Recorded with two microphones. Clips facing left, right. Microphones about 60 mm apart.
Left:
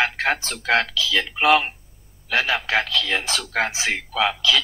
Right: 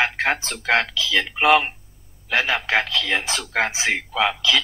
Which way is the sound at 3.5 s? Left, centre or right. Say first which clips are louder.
Right 2 dB; centre.